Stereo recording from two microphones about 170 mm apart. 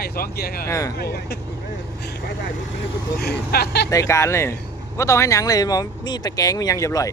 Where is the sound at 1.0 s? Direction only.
70° left (ahead or behind).